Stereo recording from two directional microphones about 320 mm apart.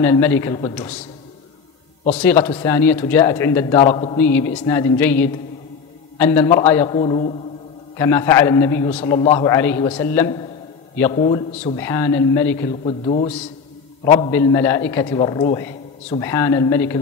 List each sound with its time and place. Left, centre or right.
0.0 s a man's voice: centre
2.1 s a man's voice: centre